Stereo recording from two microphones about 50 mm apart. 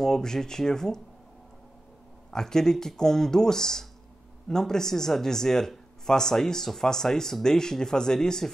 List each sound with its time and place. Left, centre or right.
0.0 s speech: centre
2.3 s speech: centre